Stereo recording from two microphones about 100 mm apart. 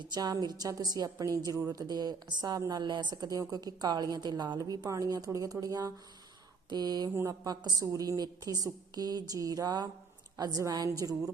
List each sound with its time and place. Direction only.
0.0 s a woman's voice: 45° right (ahead or behind)